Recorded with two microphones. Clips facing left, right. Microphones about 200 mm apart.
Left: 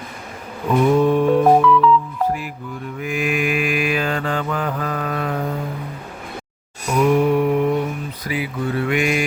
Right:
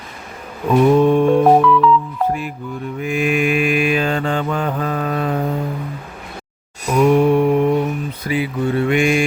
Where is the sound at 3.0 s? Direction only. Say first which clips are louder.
Right 4 dB; 25° right (ahead or behind).